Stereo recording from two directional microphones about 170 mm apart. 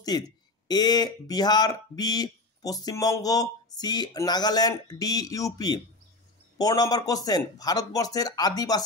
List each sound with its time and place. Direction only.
0.1 s speech: 25° left (ahead or behind)